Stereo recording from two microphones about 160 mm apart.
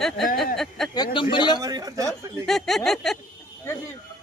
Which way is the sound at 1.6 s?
20° right (ahead or behind).